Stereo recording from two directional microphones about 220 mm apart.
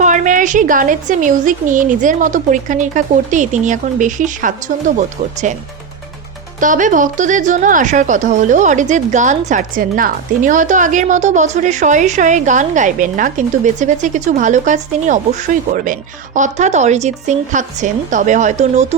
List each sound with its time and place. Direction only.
0.0 s a woman's voice: 35° right (ahead or behind)
6.6 s a woman's voice: 35° right (ahead or behind)